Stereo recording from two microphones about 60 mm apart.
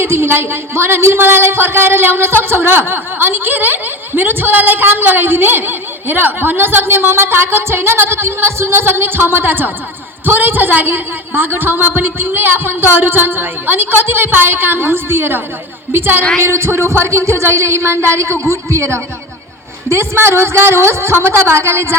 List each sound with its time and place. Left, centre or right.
0.0 s speech: right